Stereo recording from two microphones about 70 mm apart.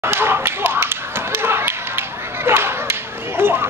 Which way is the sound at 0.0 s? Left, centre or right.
Right.